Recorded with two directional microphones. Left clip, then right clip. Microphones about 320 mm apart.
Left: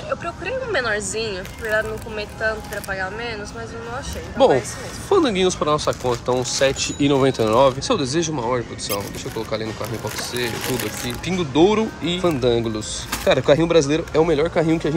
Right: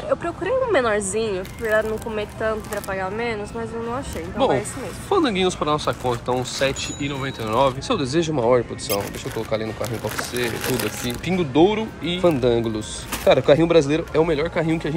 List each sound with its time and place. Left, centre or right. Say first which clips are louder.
0.2 s speech: right 4 dB; centre
4.4 s speech: left 5 dB; centre